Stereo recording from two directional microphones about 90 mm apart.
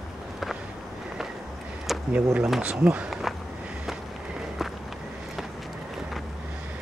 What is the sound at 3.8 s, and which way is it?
Run, 5° right (ahead or behind).